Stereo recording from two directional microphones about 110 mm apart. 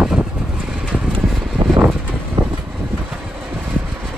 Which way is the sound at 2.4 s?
45° right (ahead or behind).